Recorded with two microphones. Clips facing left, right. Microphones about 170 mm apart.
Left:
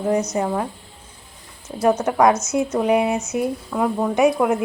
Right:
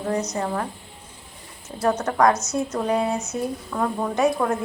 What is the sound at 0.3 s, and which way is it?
Speech, 15° left (ahead or behind).